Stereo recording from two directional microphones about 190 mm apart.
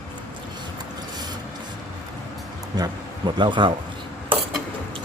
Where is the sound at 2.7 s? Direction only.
20° right (ahead or behind).